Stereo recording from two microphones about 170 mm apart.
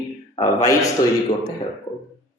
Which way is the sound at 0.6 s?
20° left (ahead or behind).